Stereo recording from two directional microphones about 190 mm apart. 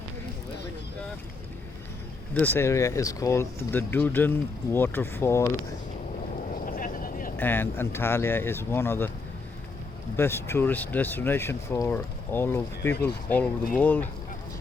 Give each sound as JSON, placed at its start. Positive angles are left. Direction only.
{"t": 2.3, "sound": "speech", "side_deg": 10}
{"t": 6.5, "sound": "a sound", "side_deg": 45}
{"t": 7.3, "sound": "speech", "side_deg": 10}
{"t": 10.2, "sound": "speech", "side_deg": 15}